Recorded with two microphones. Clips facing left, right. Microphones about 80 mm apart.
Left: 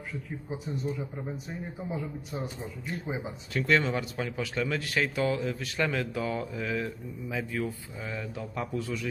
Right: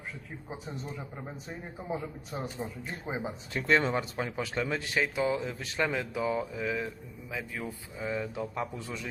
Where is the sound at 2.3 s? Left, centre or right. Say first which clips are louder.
Right 2 dB; right.